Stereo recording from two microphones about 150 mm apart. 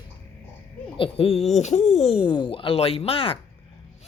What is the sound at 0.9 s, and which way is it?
Speech, 40° left (ahead or behind).